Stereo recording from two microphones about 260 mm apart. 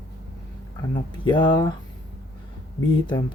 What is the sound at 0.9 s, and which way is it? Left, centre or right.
Speech, centre.